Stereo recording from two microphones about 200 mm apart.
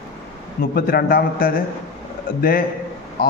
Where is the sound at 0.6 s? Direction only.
50° left (ahead or behind).